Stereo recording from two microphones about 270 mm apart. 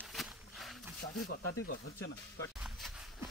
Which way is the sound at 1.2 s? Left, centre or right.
Left.